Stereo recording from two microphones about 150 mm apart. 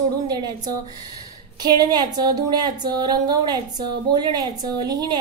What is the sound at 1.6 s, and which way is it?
A woman's voice, 25° right (ahead or behind).